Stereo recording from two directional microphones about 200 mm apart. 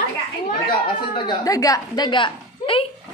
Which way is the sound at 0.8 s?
25° left (ahead or behind).